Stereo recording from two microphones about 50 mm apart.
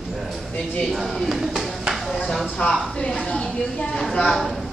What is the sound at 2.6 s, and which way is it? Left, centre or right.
A woman's voice, centre.